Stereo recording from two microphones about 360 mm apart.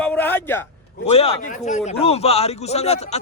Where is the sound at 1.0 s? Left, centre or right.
Centre.